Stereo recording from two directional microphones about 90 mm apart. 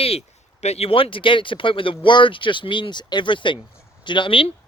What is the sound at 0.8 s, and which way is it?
Speech, 90° left.